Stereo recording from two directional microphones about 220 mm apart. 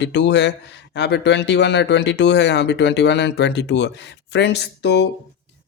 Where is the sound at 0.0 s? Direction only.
50° left (ahead or behind).